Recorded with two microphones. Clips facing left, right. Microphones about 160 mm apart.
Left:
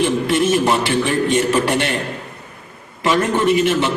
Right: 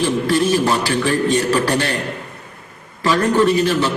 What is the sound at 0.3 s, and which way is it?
A man's voice, 20° left (ahead or behind).